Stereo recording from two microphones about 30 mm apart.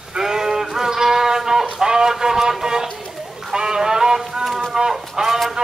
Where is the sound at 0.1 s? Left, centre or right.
Centre.